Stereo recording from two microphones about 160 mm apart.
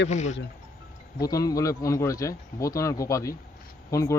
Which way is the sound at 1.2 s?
20° left (ahead or behind).